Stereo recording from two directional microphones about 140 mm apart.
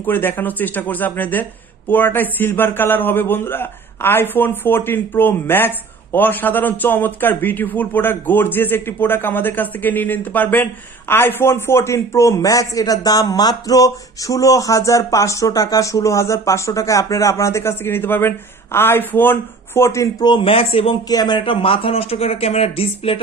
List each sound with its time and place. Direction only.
0.0 s a man's voice: 15° left (ahead or behind); by 20.9 s 40° left (ahead or behind)
21.1 s speech: 30° left (ahead or behind)